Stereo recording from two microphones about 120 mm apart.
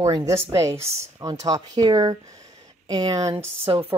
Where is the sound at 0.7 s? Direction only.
55° right (ahead or behind).